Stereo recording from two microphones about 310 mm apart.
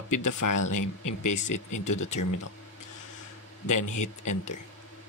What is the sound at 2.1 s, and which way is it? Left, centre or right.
Speech, left.